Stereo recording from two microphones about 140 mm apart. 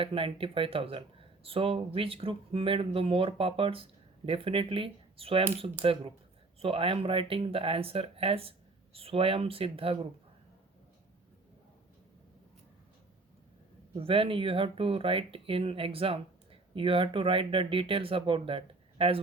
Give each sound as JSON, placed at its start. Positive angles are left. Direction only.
{"t": 0.0, "sound": "speech", "side_deg": -40}
{"t": 13.9, "sound": "speech", "side_deg": -40}